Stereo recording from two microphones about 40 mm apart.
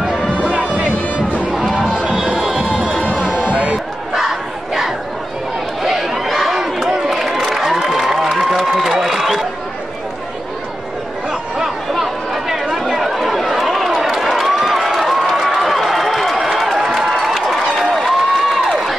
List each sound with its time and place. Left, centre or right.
0.0 s music: centre
0.5 s music: right
1.5 s music: centre
3.0 s a sound: left
3.4 s music: right
4.1 s battle cry: centre
5.9 s chatter: centre
6.5 s a sound: centre
7.8 s applause: centre
8.4 s a sound: centre
11.9 s chatter: centre
14.1 s run: centre
16.8 s crowd: centre